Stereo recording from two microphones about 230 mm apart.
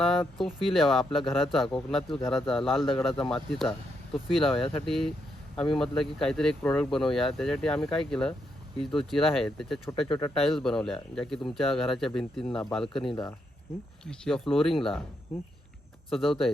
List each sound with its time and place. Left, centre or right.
0.0 s speech: centre
13.1 s speech: centre
14.0 s speech: centre
16.0 s speech: centre